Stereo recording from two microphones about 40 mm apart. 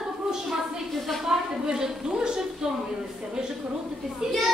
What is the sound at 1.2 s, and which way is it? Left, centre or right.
A woman's voice, centre.